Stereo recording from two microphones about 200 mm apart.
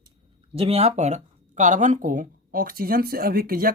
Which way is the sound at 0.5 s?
30° right (ahead or behind).